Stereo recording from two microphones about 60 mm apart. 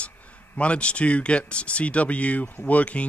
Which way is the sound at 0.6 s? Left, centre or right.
Centre.